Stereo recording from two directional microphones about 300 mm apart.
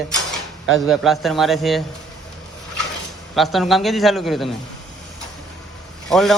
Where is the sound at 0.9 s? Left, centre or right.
Centre.